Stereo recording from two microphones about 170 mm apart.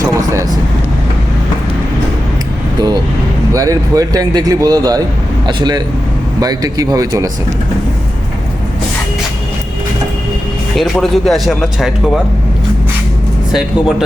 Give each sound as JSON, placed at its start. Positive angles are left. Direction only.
{"t": 0.0, "sound": "vehicle", "side_deg": -20}
{"t": 3.5, "sound": "speech", "side_deg": -20}
{"t": 10.8, "sound": "speech", "side_deg": 0}
{"t": 13.5, "sound": "speech", "side_deg": -5}